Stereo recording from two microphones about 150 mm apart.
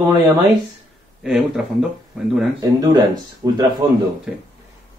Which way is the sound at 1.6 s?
5° right (ahead or behind).